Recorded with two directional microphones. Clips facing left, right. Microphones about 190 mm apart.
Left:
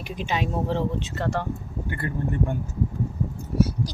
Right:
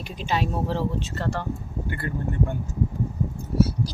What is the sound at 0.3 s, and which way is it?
Speech, 20° left (ahead or behind).